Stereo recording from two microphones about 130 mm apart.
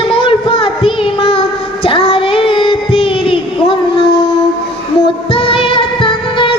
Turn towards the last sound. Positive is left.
turn(degrees=40)  # may be behind; listen again after turning